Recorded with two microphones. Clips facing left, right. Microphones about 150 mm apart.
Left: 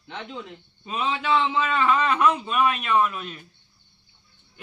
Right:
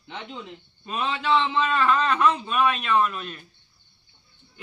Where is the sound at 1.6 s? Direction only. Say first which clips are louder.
Even; 10° left (ahead or behind).